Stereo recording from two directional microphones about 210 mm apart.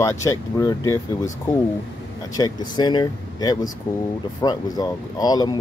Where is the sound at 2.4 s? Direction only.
20° left (ahead or behind).